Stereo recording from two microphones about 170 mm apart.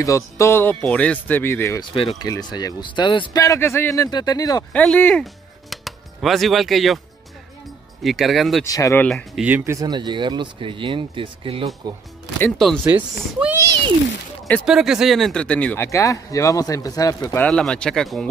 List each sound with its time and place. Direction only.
0.0 s speech: 20° left (ahead or behind)
4.7 s speech: 10° left (ahead or behind)
8.0 s speech: centre (ahead or behind)
8.6 s speech: 20° left (ahead or behind)
9.0 s speech: centre (ahead or behind)
9.8 s speech: 25° right (ahead or behind)
12.4 s speech: 5° left (ahead or behind)
13.4 s a child's voice: 10° right (ahead or behind)
14.7 s speech: 5° right (ahead or behind); by 17.5 s 20° left (ahead or behind)
17.5 s speech: 5° left (ahead or behind)